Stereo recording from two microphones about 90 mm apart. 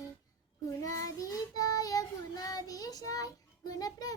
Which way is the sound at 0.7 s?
40° left (ahead or behind).